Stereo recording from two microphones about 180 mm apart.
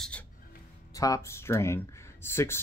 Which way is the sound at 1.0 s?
15° left (ahead or behind).